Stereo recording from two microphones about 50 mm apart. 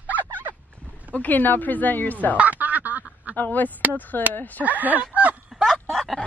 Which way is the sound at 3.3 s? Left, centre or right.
Left.